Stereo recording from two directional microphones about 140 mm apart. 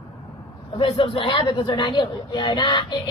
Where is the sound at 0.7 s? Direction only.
40° left (ahead or behind).